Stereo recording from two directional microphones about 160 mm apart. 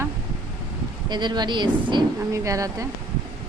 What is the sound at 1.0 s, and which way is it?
A woman's voice, 25° right (ahead or behind).